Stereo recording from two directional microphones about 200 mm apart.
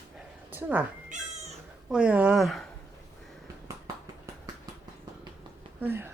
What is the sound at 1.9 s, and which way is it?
Speech, 5° right (ahead or behind).